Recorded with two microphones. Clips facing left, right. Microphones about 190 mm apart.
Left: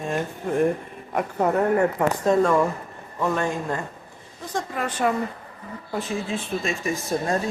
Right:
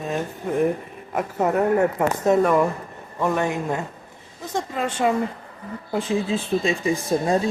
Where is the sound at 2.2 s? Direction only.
15° right (ahead or behind).